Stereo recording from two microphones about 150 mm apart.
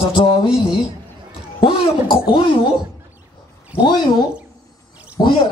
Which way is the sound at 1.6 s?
35° left (ahead or behind).